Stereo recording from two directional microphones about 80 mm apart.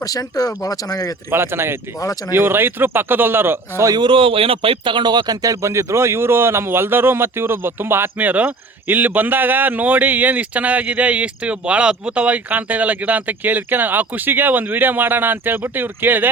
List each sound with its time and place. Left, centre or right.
0.0 s speech: left
1.3 s speech: right
3.9 s speech: right